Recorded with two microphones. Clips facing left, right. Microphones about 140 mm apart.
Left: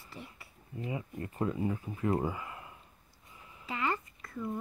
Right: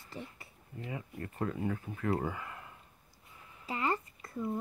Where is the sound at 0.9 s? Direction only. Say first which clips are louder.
Left 3 dB; 20° left (ahead or behind).